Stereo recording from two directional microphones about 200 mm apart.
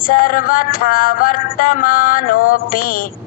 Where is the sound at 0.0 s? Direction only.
45° left (ahead or behind).